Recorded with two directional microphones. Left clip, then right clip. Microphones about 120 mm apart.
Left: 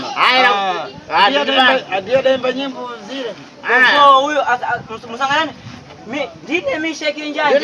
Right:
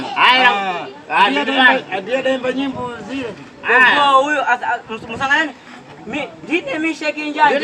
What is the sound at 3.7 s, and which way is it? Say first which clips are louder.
Speech: left 2 dB; 20° left (ahead or behind).